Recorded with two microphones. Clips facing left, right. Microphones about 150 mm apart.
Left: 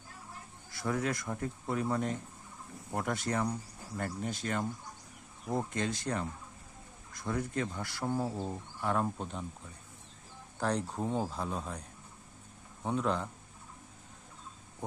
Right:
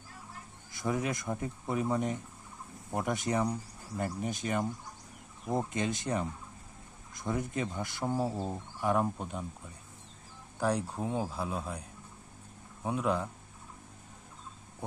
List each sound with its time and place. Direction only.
0.7 s speech: 20° right (ahead or behind)
10.6 s speech: 10° right (ahead or behind)